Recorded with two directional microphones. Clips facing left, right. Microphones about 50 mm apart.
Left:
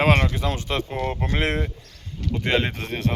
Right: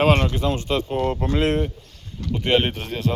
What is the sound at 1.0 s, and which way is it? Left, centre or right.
Speech, left.